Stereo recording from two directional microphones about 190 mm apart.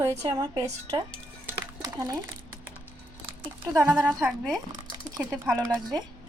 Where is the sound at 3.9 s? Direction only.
Centre (ahead or behind).